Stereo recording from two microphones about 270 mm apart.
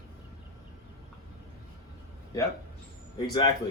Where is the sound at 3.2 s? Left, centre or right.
Centre.